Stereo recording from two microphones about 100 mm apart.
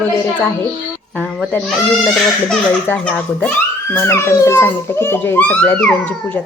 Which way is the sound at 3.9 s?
25° left (ahead or behind).